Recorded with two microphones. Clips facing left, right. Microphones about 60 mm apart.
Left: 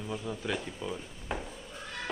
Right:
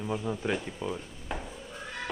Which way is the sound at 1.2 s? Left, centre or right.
Centre.